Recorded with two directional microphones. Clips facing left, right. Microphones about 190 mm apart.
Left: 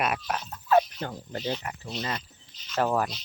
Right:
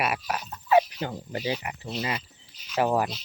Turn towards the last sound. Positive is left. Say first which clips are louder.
# right 2 dB
turn(degrees=-10)  # may be behind; listen again after turning